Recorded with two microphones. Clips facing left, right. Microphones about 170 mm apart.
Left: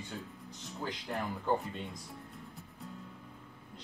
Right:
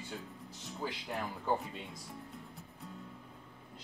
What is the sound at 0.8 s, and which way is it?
Speech, 5° right (ahead or behind).